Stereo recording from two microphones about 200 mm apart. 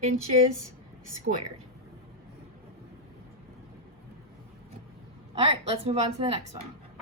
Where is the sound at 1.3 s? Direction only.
50° right (ahead or behind).